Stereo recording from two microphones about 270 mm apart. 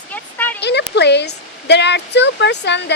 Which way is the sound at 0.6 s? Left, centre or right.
Left.